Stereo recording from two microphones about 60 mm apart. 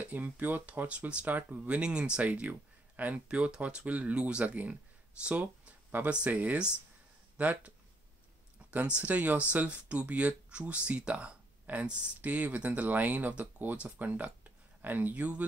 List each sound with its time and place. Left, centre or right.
0.0 s speech: right
5.2 s a sound: right
6.0 s speech: right